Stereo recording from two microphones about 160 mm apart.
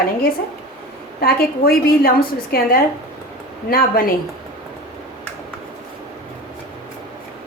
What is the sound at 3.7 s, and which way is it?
Speech, 65° left (ahead or behind).